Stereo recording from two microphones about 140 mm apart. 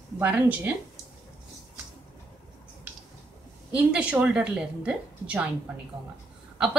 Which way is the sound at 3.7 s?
10° right (ahead or behind).